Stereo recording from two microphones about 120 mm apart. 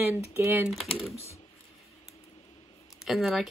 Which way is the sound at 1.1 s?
60° left (ahead or behind).